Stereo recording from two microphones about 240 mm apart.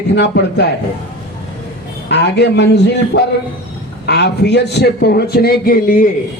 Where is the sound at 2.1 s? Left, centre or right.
Left.